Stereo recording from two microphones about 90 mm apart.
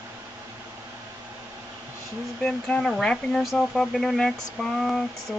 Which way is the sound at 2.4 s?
10° left (ahead or behind).